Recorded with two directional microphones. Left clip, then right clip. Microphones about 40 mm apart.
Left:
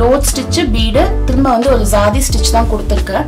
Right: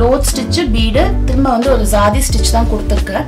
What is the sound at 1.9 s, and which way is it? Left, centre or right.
Music, left.